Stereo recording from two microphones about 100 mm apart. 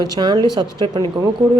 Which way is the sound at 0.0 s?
50° right (ahead or behind).